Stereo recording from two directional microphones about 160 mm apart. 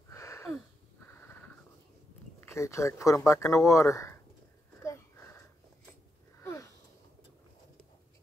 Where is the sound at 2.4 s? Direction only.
20° left (ahead or behind).